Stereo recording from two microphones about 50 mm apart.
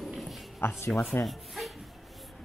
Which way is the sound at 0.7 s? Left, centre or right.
Left.